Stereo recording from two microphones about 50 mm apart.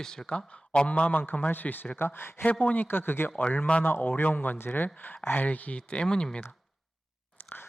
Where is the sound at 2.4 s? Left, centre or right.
Left.